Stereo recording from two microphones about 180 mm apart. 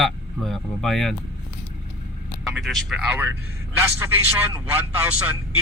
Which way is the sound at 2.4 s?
Centre (ahead or behind).